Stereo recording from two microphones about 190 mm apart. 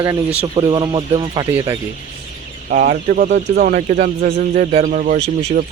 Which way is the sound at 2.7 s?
45° right (ahead or behind).